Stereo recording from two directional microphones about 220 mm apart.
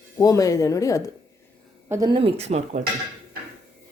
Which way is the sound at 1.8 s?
15° right (ahead or behind).